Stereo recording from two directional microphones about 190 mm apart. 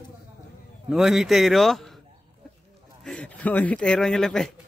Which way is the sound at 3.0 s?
5° left (ahead or behind).